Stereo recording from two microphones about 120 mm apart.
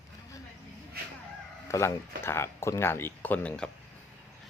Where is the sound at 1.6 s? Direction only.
25° left (ahead or behind).